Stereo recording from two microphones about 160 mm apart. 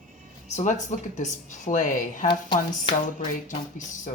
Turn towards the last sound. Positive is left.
turn(degrees=55)  # may be behind; listen again after turning